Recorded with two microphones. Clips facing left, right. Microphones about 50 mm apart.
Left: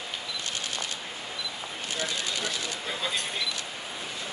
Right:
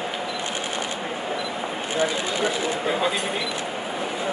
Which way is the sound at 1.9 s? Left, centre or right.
Right.